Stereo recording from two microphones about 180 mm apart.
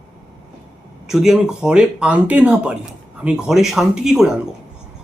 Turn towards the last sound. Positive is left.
turn(degrees=-5)  # may be behind; listen again after turning